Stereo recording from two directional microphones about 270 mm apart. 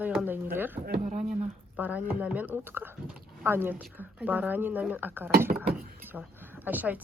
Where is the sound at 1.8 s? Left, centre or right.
Centre.